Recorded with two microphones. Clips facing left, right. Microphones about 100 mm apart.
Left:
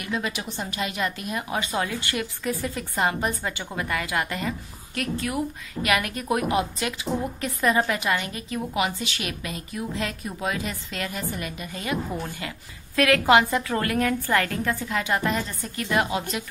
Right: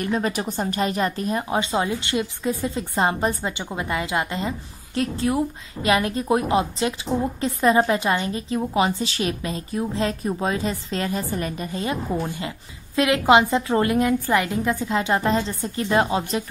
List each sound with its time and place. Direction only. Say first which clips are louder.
0.0 s a woman's voice: right 6 dB; 40° right (ahead or behind)